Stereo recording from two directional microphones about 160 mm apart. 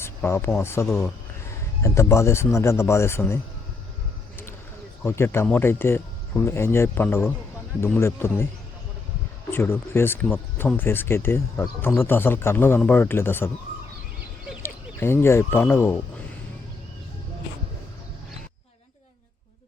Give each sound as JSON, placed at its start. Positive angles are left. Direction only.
{"t": 0.0, "sound": "a sound", "side_deg": 15}
{"t": 0.6, "sound": "speech", "side_deg": 15}
{"t": 5.0, "sound": "speech", "side_deg": 15}
{"t": 9.5, "sound": "speech", "side_deg": 15}
{"t": 14.6, "sound": "speech", "side_deg": 15}